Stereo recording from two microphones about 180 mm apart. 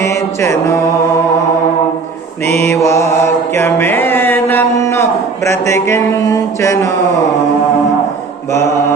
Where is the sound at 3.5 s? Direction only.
10° left (ahead or behind).